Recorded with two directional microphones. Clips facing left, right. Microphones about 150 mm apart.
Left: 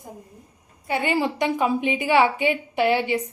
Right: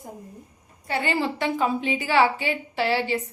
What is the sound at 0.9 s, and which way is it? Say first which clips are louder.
A woman's voice: left 2 dB; 15° left (ahead or behind).